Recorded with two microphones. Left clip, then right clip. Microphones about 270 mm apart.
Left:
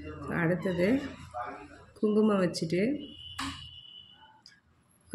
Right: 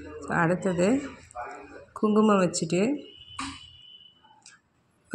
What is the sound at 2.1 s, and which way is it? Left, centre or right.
Speech, centre.